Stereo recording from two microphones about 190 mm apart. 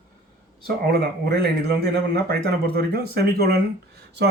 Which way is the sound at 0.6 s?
55° right (ahead or behind).